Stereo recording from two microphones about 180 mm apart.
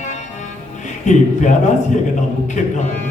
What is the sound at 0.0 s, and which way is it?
Music, 40° left (ahead or behind).